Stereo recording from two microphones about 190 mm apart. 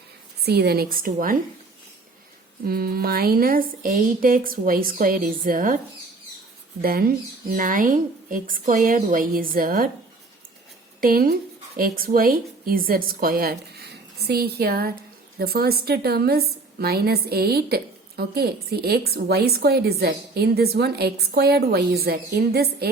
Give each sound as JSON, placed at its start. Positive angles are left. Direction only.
{"t": 0.4, "sound": "a woman's voice", "side_deg": -55}
{"t": 2.6, "sound": "a woman's voice", "side_deg": -55}
{"t": 6.8, "sound": "a woman's voice", "side_deg": -50}
{"t": 11.0, "sound": "a woman's voice", "side_deg": -50}